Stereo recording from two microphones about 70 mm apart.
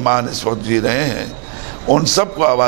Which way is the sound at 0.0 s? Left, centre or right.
Centre.